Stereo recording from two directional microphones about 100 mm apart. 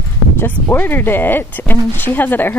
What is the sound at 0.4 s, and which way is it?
Speech, 20° left (ahead or behind).